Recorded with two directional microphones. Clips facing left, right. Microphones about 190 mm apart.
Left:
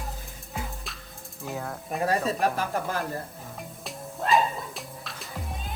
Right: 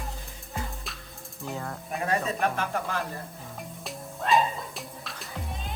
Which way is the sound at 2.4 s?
40° left (ahead or behind).